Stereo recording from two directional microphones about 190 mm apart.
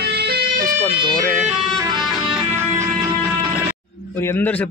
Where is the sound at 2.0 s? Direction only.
5° right (ahead or behind).